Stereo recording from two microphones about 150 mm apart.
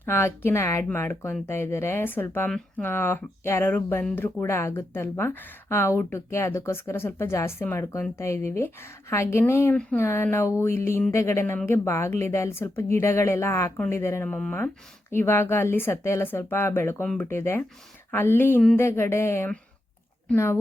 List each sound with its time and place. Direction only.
0.0 s speech: 15° left (ahead or behind)